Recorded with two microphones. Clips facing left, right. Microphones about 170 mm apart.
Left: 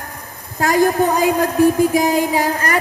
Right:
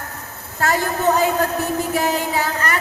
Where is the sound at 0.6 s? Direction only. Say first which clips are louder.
Left 4 dB; 15° left (ahead or behind).